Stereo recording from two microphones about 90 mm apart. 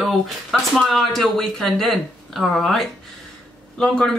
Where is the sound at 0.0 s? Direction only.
Centre (ahead or behind).